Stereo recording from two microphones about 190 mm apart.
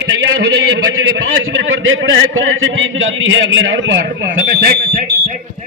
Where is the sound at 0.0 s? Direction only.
65° right (ahead or behind).